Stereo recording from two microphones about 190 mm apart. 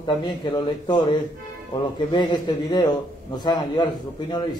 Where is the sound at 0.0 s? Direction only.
25° left (ahead or behind).